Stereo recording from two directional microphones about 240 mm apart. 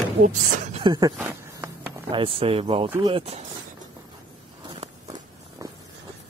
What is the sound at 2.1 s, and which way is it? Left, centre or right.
Speech, right.